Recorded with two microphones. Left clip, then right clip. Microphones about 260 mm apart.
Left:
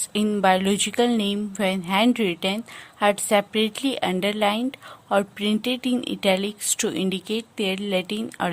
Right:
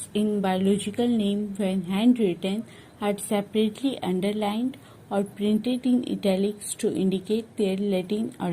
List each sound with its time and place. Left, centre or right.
0.1 s speech: left